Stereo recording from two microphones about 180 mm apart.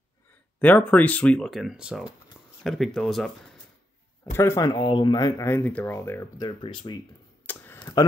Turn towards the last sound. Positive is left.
turn(degrees=10)  # may be behind; listen again after turning